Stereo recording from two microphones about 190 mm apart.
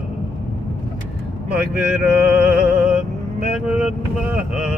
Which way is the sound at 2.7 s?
5° right (ahead or behind).